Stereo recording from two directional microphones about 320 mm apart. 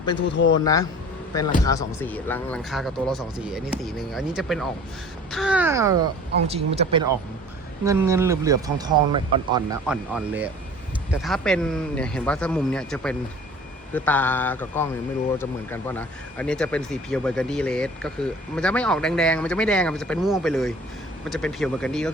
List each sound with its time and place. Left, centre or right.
0.2 s a man's voice: left
0.6 s speech: centre